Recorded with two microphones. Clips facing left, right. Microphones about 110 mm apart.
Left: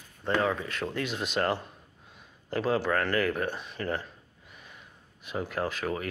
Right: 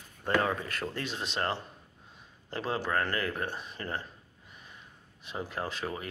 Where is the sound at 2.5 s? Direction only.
25° right (ahead or behind).